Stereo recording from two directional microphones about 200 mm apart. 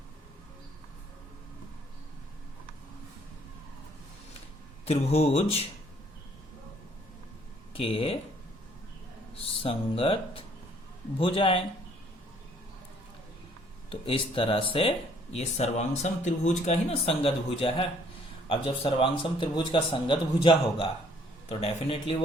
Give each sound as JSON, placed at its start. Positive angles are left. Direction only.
{"t": 4.9, "sound": "speech", "side_deg": 30}
{"t": 7.7, "sound": "a man's voice", "side_deg": 30}
{"t": 9.6, "sound": "a man's voice", "side_deg": 25}
{"t": 13.9, "sound": "a man's voice", "side_deg": 25}